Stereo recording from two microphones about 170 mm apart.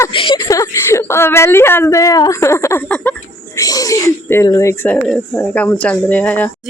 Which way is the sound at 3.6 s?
20° left (ahead or behind).